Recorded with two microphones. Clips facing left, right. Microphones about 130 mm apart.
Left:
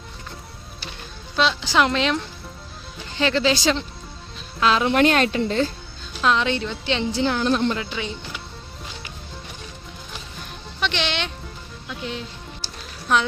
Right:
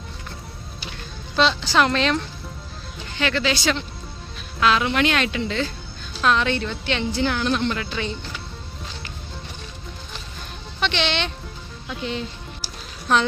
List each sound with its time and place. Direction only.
1.6 s speech: 15° left (ahead or behind)
3.2 s a woman's voice: 30° left (ahead or behind)
6.2 s a woman's voice: 20° left (ahead or behind)
7.7 s a woman's voice: 20° left (ahead or behind)
7.9 s speech: 10° left (ahead or behind)
10.8 s speech: 5° left (ahead or behind)